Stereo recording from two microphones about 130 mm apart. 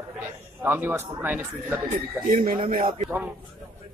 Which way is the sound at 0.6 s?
15° right (ahead or behind).